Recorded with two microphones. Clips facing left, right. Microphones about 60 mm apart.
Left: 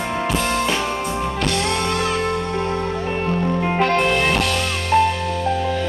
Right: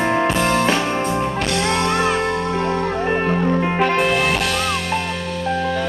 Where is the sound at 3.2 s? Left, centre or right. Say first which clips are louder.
Right 3 dB; right.